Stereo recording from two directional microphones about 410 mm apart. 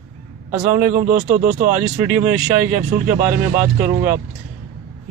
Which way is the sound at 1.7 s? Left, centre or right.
Centre.